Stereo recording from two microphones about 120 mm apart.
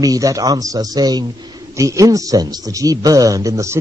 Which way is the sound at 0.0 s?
30° right (ahead or behind).